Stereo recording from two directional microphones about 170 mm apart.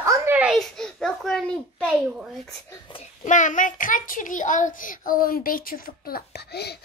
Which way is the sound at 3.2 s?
50° left (ahead or behind).